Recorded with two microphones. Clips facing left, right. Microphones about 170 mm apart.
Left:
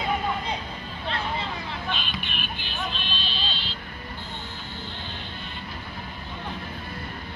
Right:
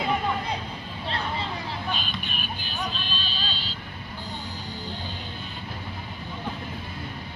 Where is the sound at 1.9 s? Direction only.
40° right (ahead or behind).